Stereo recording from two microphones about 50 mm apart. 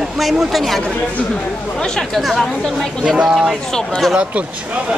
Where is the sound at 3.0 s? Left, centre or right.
Centre.